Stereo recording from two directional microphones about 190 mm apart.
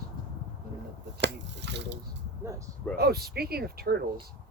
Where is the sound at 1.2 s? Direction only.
65° right (ahead or behind).